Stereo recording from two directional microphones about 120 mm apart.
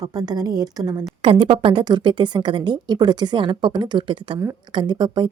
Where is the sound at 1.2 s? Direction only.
45° right (ahead or behind).